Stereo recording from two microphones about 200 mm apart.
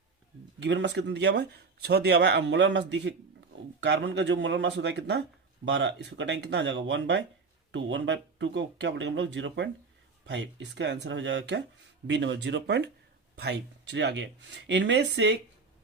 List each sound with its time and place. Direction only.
0.6 s speech: 60° right (ahead or behind)